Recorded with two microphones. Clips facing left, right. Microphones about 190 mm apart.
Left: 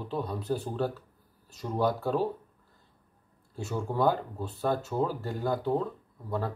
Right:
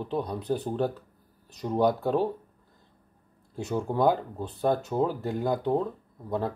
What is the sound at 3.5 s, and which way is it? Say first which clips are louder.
Speech: right 4 dB; 20° right (ahead or behind).